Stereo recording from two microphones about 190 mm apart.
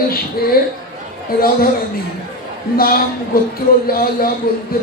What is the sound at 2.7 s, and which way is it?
Music, 50° left (ahead or behind).